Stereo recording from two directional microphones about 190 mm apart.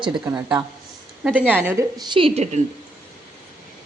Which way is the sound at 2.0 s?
30° right (ahead or behind).